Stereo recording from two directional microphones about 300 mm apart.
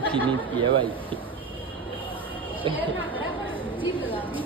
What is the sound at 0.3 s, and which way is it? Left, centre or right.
Speech, centre.